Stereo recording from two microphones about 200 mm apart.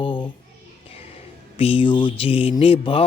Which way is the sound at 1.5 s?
25° left (ahead or behind).